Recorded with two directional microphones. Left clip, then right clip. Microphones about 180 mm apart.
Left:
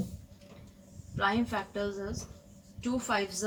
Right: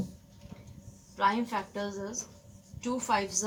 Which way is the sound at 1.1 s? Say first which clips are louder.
Right 2 dB; 20° right (ahead or behind).